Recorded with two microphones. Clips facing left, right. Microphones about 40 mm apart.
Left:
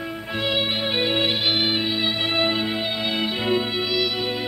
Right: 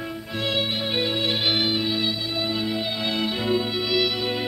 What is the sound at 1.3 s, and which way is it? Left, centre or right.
Music, centre.